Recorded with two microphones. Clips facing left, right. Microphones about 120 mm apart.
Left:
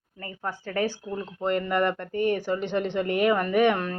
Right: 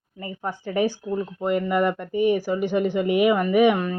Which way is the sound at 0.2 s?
15° right (ahead or behind).